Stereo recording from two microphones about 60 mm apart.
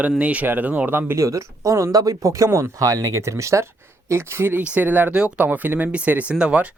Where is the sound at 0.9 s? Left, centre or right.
Right.